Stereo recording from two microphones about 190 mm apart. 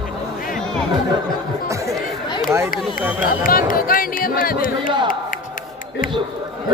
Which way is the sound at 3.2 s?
50° left (ahead or behind).